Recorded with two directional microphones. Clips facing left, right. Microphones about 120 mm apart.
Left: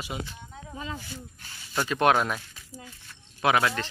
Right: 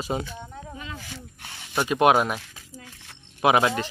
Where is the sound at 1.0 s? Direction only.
85° right; by 1.7 s 70° right (ahead or behind).